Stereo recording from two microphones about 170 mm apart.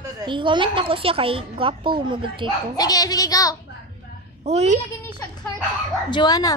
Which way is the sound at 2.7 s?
20° left (ahead or behind).